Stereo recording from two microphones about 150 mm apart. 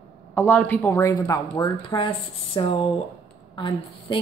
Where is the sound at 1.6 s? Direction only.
30° left (ahead or behind).